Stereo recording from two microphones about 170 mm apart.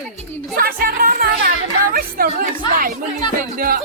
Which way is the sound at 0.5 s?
60° right (ahead or behind).